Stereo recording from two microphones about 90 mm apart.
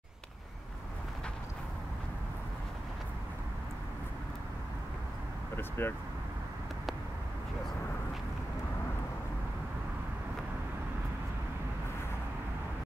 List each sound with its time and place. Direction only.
5.6 s vehicle: 25° left (ahead or behind)